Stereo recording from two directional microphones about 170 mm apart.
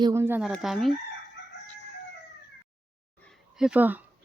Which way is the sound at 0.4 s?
Centre (ahead or behind).